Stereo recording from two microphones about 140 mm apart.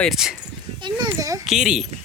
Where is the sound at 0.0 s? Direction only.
Centre (ahead or behind).